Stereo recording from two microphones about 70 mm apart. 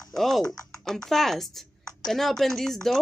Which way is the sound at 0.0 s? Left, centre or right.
Centre.